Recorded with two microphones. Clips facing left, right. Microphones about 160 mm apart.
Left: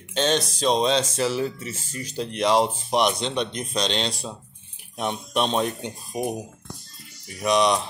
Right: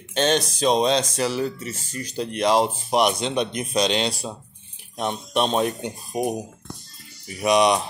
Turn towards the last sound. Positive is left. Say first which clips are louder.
# right 2 dB
turn(degrees=-10)  # may be behind; listen again after turning